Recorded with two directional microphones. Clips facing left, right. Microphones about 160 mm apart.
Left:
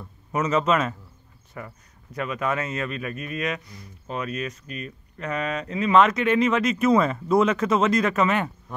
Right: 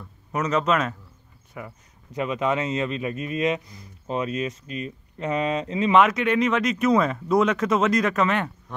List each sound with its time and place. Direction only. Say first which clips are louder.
0.3 s speech: left 1 dB; 5° left (ahead or behind)
1.6 s speech: even; 10° right (ahead or behind)
5.9 s speech: left 1 dB; 5° right (ahead or behind)